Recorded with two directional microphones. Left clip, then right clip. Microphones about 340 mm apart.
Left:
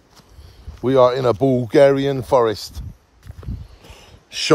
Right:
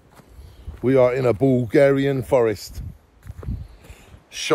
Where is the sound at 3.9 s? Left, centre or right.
Left.